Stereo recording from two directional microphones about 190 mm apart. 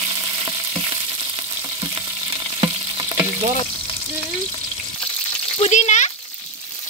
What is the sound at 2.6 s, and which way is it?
Frying, 25° right (ahead or behind).